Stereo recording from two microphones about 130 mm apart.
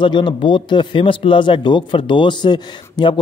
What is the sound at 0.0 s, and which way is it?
Speech, 40° left (ahead or behind).